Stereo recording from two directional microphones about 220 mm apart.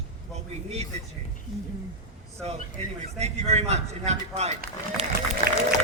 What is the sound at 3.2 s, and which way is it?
Speech, 30° right (ahead or behind).